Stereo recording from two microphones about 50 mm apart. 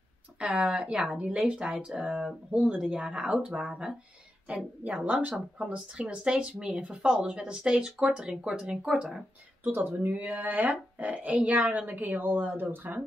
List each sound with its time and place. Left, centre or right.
0.4 s speech: centre
4.8 s speech: right; by 9.1 s centre
9.6 s speech: right